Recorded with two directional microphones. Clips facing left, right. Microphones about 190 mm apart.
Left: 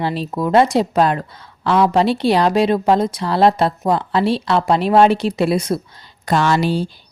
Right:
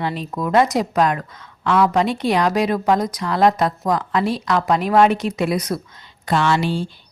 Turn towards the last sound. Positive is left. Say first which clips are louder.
# left 2 dB
turn(degrees=40)  # may be behind; listen again after turning